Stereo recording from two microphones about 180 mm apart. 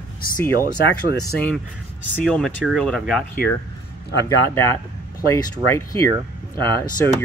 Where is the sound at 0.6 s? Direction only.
60° left (ahead or behind).